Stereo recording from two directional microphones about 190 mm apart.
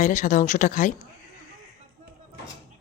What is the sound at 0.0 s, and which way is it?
Speech, 40° left (ahead or behind).